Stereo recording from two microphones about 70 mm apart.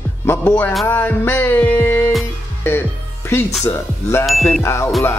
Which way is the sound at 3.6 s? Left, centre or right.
Left.